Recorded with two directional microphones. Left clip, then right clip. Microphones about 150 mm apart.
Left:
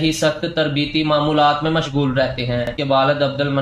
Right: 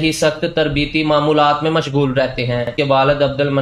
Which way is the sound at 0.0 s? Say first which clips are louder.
Right 2 dB; 35° right (ahead or behind).